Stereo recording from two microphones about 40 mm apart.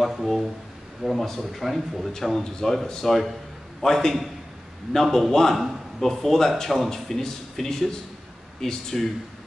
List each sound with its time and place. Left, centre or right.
0.0 s a man's voice: centre